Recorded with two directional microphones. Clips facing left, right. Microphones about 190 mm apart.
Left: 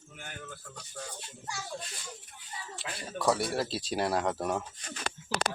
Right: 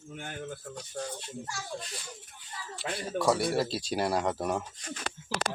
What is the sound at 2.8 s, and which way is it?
Speech, centre (ahead or behind).